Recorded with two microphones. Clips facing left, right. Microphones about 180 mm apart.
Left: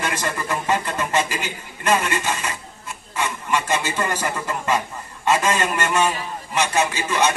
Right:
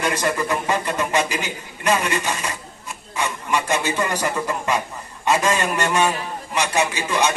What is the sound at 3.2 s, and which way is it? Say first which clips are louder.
A man's voice: even; 15° right (ahead or behind).